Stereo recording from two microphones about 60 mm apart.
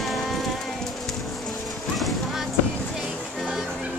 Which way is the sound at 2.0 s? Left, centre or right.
Centre.